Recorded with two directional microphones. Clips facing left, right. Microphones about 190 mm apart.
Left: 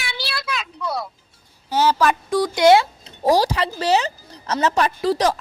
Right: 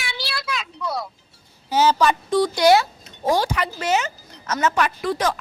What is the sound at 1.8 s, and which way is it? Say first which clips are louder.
A woman's voice: even; 5° left (ahead or behind).